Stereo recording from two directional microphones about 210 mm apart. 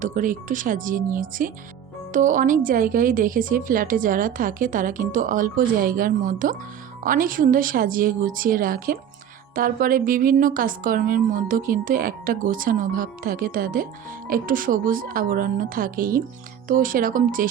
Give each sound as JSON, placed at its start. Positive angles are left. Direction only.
{"t": 0.0, "sound": "a woman's voice", "side_deg": -40}